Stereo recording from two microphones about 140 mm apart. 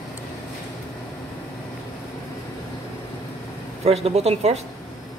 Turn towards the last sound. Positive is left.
turn(degrees=-50)  # may be behind; listen again after turning